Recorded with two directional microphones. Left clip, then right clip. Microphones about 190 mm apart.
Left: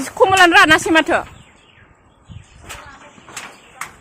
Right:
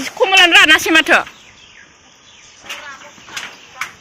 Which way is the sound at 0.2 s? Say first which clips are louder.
Right 1 dB; 35° left (ahead or behind).